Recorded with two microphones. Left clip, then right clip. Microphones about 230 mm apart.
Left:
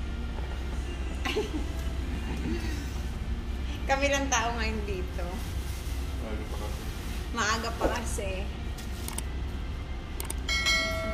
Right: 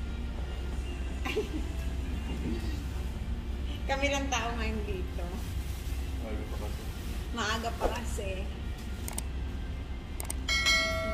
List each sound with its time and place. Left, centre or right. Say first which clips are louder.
3.9 s a woman's voice: left 4 dB; centre
7.3 s a woman's voice: left 4 dB; centre
10.4 s train: even; centre